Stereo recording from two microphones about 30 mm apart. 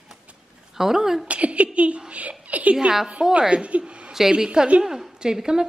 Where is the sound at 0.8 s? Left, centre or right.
Centre.